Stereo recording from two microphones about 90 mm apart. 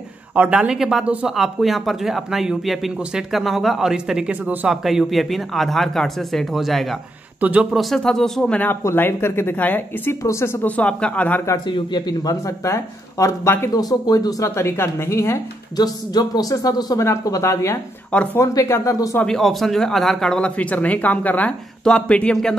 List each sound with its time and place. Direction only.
0.3 s speech: 15° right (ahead or behind)
4.8 s speech: centre (ahead or behind)
7.3 s speech: 20° right (ahead or behind)
7.7 s speech: centre (ahead or behind)
8.8 s speech: 25° left (ahead or behind)
10.8 s speech: 10° left (ahead or behind)
11.6 s a man's voice: 55° left (ahead or behind); by 13.7 s 30° left (ahead or behind)
13.7 s speech: 45° left (ahead or behind)
14.5 s a man's voice: 30° left (ahead or behind)
15.7 s a man's voice: 45° left (ahead or behind)
18.1 s speech: 15° left (ahead or behind)
18.4 s a man's voice: 35° left (ahead or behind)
19.2 s speech: 5° left (ahead or behind)